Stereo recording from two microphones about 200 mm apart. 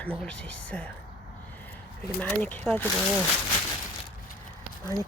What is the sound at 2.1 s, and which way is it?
Speech, 10° left (ahead or behind).